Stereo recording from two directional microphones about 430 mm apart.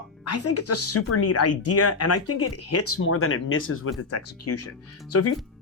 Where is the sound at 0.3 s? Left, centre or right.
Left.